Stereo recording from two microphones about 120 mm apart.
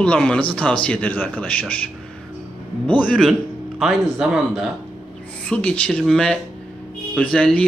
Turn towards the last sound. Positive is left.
turn(degrees=10)  # may be behind; listen again after turning